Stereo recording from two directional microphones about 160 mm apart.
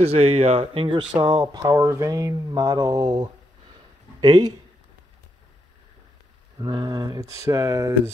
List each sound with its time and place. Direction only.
0.0 s speech: 40° right (ahead or behind)
6.6 s speech: 25° right (ahead or behind)